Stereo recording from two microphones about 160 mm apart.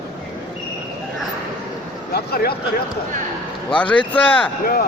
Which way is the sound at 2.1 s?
75° left (ahead or behind).